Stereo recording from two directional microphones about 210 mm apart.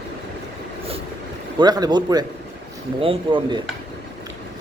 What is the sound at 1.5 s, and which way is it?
Speech, 20° right (ahead or behind).